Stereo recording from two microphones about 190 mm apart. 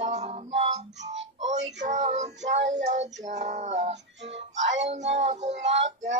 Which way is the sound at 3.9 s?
65° right (ahead or behind).